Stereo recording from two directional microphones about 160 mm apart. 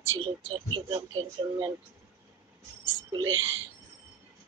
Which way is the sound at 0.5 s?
30° right (ahead or behind).